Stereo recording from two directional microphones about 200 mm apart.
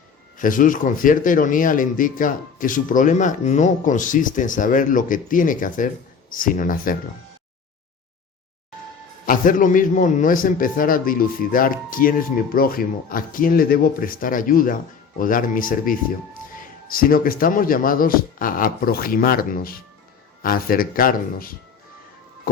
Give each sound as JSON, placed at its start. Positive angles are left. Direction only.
{"t": 0.3, "sound": "a man's voice", "side_deg": 40}
{"t": 9.2, "sound": "a man's voice", "side_deg": 45}